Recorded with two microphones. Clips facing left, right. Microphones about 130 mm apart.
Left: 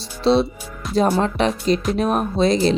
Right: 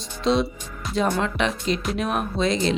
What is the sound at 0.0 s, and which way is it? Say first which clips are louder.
Speech: left 5 dB; 35° left (ahead or behind).